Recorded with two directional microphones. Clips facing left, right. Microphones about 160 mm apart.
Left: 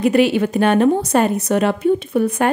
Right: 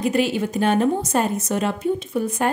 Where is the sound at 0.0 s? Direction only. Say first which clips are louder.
Left 6 dB; 65° left (ahead or behind).